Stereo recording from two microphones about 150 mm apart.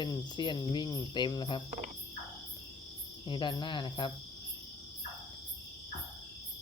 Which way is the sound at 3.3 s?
30° left (ahead or behind).